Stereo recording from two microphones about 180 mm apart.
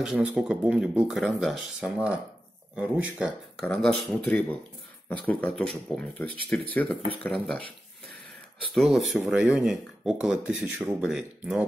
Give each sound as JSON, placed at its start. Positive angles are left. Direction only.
{"t": 0.0, "sound": "speech", "side_deg": -5}
{"t": 3.5, "sound": "speech", "side_deg": 5}
{"t": 8.7, "sound": "speech", "side_deg": 0}